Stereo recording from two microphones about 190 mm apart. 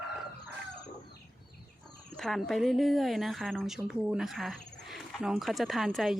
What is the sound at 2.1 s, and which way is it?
Speech, centre (ahead or behind).